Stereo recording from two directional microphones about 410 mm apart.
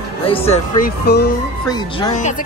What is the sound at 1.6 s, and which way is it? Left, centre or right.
Speech, centre.